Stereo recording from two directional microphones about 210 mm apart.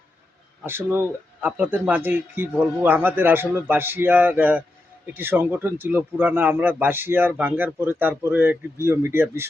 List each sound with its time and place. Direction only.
0.6 s a man's voice: 10° right (ahead or behind)